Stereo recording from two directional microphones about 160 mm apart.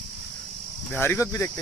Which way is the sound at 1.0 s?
15° left (ahead or behind).